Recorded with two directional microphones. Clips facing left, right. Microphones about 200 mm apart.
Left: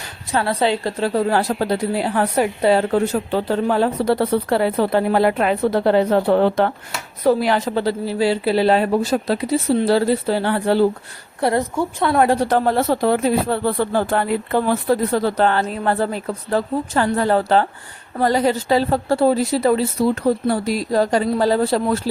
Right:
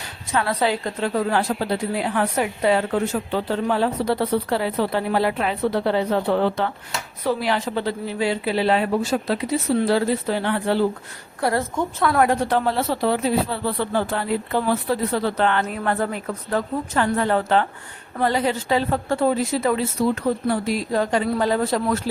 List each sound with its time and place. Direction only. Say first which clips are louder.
0.3 s a woman's voice: left 3 dB; 30° left (ahead or behind)
11.3 s a woman's voice: left 3 dB; 25° left (ahead or behind)
11.7 s a woman's voice: left 3 dB; 10° left (ahead or behind)
12.0 s a woman's voice: left 3 dB; 30° left (ahead or behind)